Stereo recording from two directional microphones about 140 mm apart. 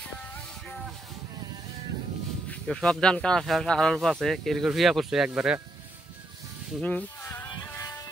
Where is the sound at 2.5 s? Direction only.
5° left (ahead or behind).